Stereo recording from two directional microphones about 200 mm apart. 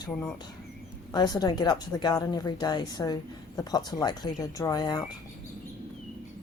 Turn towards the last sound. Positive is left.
turn(degrees=20)  # may be behind; listen again after turning